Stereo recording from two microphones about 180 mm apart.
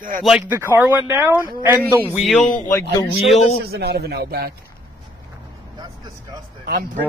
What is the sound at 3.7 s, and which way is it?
Speech, 60° right (ahead or behind).